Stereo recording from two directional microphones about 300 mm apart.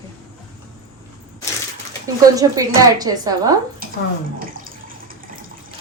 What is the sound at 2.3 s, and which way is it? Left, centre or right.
A woman's voice, centre.